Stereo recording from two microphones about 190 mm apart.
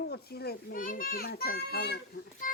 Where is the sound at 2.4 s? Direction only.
45° left (ahead or behind).